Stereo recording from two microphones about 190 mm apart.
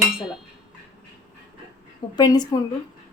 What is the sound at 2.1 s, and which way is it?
Speech, 20° left (ahead or behind).